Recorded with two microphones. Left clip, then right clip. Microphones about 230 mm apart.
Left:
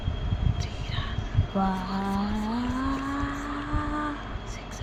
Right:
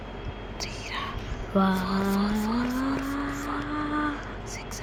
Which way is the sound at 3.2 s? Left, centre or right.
Centre.